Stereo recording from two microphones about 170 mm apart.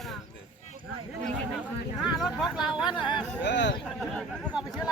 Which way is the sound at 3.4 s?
90° left.